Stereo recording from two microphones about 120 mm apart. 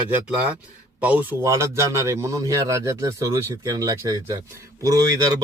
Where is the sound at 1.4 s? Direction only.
25° right (ahead or behind).